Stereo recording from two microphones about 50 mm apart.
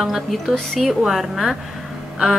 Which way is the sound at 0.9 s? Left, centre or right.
Centre.